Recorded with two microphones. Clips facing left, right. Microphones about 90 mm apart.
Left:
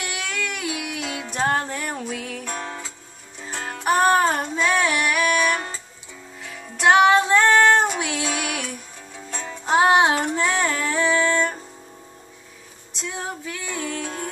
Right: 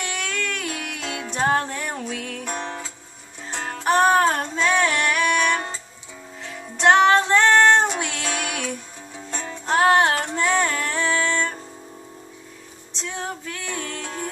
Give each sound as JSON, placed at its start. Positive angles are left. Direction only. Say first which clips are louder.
{"t": 0.0, "sound": "music", "louder": "right 1 dB", "side_deg": 10}
{"t": 2.5, "sound": "music", "louder": "right 3 dB", "side_deg": -20}
{"t": 3.4, "sound": "music", "louder": "even", "side_deg": 10}
{"t": 6.8, "sound": "female singing", "louder": "even", "side_deg": 5}
{"t": 9.3, "sound": "music", "louder": "left 2 dB", "side_deg": 5}
{"t": 12.9, "sound": "music", "louder": "even", "side_deg": 5}